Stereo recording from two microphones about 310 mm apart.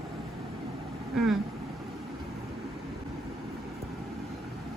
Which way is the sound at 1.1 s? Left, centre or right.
Centre.